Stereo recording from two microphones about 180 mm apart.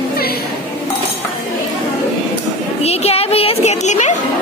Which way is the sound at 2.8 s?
35° left (ahead or behind).